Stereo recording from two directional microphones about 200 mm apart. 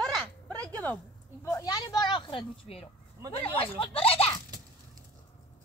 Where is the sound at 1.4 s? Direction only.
15° left (ahead or behind).